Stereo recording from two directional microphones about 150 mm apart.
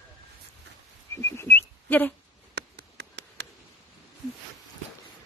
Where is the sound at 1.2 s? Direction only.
15° left (ahead or behind).